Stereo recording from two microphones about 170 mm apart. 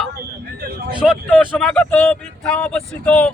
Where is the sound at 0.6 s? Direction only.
65° right (ahead or behind).